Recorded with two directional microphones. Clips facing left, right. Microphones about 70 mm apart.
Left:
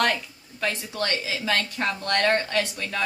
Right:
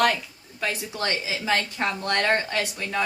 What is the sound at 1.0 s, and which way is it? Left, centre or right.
Speech, centre.